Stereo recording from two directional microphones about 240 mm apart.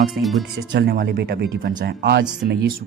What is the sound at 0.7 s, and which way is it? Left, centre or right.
Speech, right.